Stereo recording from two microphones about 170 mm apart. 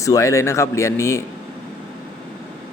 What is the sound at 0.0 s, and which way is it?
Speech, 20° left (ahead or behind).